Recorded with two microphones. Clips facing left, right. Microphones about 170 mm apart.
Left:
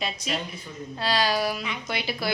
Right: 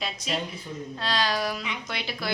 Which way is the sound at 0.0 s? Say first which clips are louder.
Even; centre (ahead or behind).